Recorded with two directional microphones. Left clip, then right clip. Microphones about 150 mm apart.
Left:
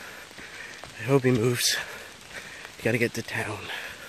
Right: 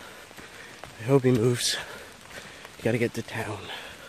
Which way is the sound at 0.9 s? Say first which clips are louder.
Right 1 dB; 10° right (ahead or behind).